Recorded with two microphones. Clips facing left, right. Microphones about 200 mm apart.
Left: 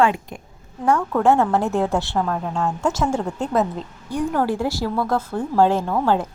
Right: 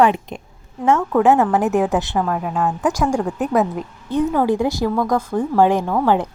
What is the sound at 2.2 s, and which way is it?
Speech, 5° right (ahead or behind).